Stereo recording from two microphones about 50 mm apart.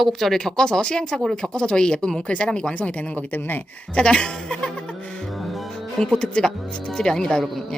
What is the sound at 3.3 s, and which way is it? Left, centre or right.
Speech, left.